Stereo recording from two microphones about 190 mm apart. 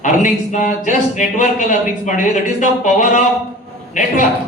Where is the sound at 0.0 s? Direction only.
40° left (ahead or behind).